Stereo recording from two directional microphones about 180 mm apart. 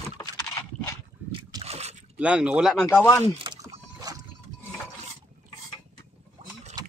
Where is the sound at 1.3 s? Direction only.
20° right (ahead or behind).